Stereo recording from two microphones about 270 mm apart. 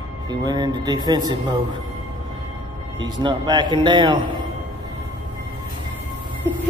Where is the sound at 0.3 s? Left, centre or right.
Centre.